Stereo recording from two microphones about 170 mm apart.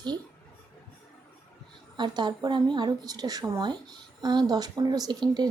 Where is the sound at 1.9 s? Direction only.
25° right (ahead or behind).